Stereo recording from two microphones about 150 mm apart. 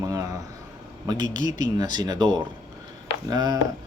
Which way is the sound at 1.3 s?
55° left (ahead or behind).